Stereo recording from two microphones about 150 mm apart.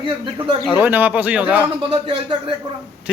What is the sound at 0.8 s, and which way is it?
Speech, 10° right (ahead or behind).